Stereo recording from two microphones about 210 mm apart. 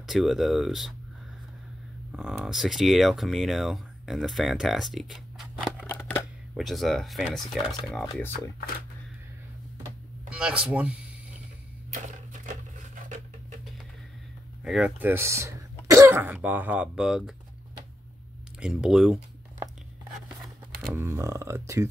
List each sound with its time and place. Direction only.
0.0 s speech: centre (ahead or behind)
2.1 s speech: 5° right (ahead or behind)
8.3 s speech: 45° left (ahead or behind)
10.3 s speech: 5° right (ahead or behind)
11.9 s a sound: 35° right (ahead or behind)
14.6 s speech: 5° right (ahead or behind)
15.9 s throat clearing: 10° right (ahead or behind)
16.4 s speech: 10° right (ahead or behind)
18.6 s speech: 5° right (ahead or behind)
20.9 s speech: 15° right (ahead or behind)